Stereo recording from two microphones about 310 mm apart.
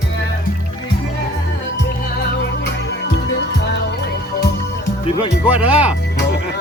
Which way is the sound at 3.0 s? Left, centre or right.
Left.